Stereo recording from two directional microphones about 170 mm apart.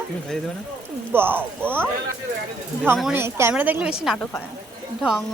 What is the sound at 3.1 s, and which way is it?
A man's voice, 15° right (ahead or behind).